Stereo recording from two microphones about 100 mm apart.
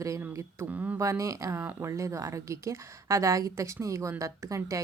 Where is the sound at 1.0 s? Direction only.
30° right (ahead or behind).